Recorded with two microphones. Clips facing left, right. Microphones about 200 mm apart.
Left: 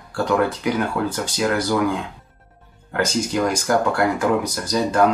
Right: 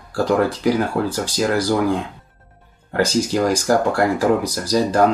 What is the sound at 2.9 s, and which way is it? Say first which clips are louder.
Speech: right 3 dB; 35° right (ahead or behind).